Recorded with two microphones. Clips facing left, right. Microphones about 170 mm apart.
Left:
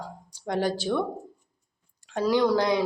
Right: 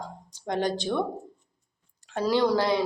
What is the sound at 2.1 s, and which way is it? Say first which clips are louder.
Speech: left 1 dB; 15° left (ahead or behind).